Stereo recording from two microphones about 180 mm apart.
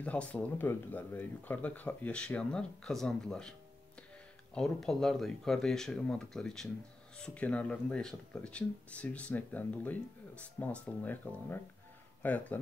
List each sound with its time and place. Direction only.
0.0 s speech: 5° left (ahead or behind)
4.6 s speech: centre (ahead or behind)